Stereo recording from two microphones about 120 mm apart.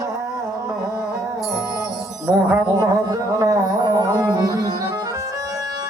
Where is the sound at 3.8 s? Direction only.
40° right (ahead or behind).